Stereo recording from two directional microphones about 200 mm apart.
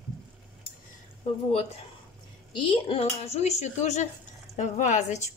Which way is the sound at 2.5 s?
25° left (ahead or behind).